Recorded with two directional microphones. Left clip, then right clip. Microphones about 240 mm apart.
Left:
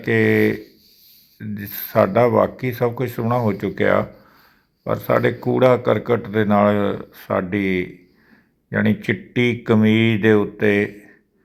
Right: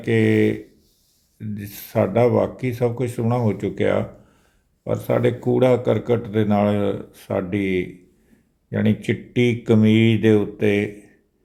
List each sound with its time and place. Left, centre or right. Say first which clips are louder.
0.0 s speech: left 2 dB; centre